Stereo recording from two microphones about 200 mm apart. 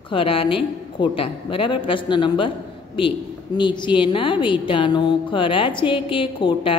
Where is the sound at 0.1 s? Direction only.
25° left (ahead or behind).